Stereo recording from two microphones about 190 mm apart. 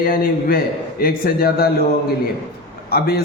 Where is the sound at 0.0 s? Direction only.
50° left (ahead or behind).